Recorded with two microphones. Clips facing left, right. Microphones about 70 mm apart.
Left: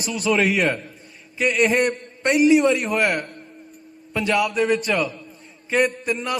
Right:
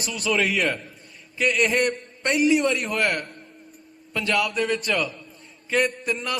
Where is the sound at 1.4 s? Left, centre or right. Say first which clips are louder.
Left 3 dB; left.